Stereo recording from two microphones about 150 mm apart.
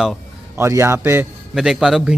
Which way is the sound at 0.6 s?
15° right (ahead or behind).